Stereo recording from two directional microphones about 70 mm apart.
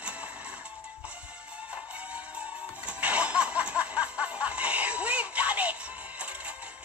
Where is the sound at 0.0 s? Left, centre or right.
Centre.